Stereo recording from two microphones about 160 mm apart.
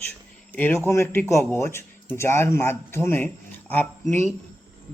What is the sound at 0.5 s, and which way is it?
Speech, 10° left (ahead or behind).